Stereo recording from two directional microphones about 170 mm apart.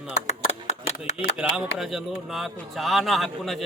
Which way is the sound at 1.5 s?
Centre (ahead or behind).